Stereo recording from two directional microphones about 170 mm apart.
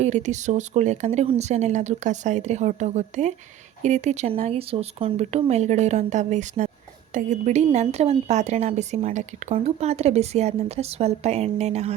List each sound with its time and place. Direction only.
0.0 s a woman's voice: 45° right (ahead or behind)